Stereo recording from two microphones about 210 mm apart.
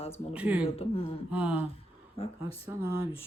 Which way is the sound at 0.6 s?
30° left (ahead or behind).